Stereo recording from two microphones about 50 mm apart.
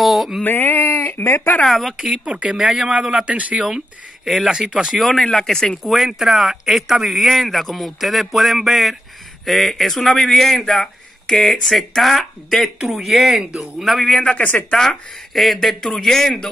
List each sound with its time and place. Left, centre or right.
0.0 s a sound: centre
0.4 s speech: left
1.7 s speech: centre
2.2 s speech: right
3.6 s speech: centre
4.9 s speech: centre
5.9 s speech: centre
13.5 s speech: centre
13.8 s speech: centre
14.1 s speech: left
14.8 s speech: centre